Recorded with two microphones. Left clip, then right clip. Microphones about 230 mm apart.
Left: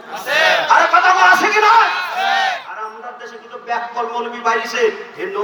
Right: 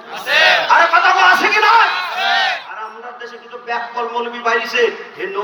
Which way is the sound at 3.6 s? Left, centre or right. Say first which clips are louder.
Even; left.